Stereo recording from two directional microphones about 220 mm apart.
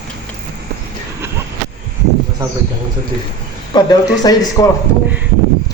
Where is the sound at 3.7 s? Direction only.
20° left (ahead or behind).